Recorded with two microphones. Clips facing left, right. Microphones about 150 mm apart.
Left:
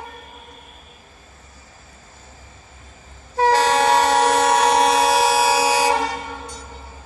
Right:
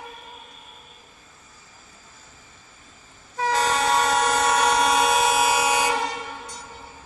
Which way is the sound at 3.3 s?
75° left (ahead or behind).